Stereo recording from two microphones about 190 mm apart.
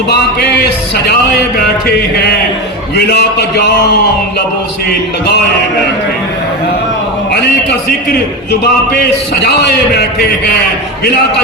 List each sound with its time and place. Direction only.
0.1 s a man's voice: 60° left (ahead or behind)
4.9 s a man's voice: 55° left (ahead or behind)
8.6 s a man's voice: 60° left (ahead or behind)